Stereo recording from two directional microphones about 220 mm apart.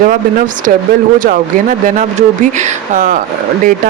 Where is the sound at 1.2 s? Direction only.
35° right (ahead or behind).